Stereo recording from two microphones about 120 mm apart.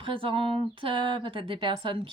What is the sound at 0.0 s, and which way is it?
Speech, 45° right (ahead or behind).